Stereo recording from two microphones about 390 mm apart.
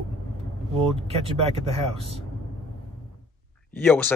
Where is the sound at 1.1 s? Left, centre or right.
Centre.